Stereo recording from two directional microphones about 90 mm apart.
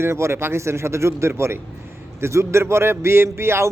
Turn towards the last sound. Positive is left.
turn(degrees=-30)  # may be behind; listen again after turning